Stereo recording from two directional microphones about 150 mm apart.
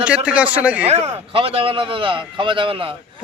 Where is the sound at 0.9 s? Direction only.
45° right (ahead or behind).